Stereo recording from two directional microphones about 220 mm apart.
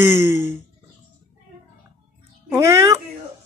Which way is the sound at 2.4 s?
10° right (ahead or behind).